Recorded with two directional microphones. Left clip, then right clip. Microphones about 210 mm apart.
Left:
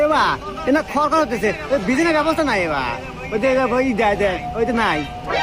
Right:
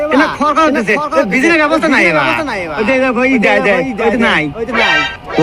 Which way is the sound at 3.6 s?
Centre (ahead or behind).